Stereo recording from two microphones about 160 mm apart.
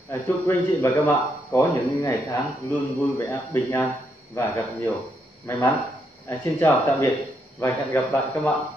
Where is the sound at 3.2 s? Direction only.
15° left (ahead or behind).